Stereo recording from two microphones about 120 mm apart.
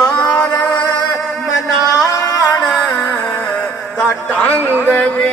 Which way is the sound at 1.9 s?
30° left (ahead or behind).